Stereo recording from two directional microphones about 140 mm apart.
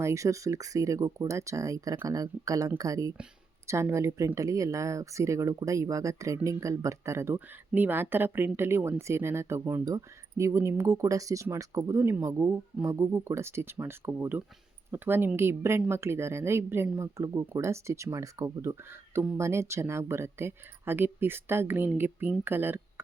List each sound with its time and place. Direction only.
0.0 s speech: 20° right (ahead or behind)